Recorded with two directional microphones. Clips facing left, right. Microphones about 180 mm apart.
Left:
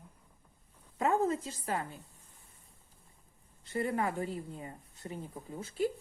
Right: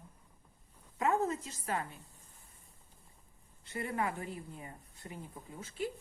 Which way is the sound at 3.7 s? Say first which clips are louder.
Left 4 dB; 35° left (ahead or behind).